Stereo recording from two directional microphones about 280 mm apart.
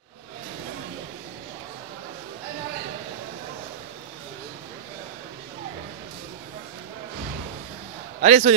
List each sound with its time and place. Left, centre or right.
8.2 s a man's voice: right